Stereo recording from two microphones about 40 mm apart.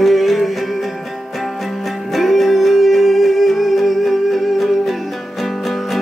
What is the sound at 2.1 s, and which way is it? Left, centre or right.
Music, centre.